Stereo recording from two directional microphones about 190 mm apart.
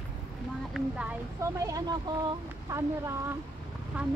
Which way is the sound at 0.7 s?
5° right (ahead or behind).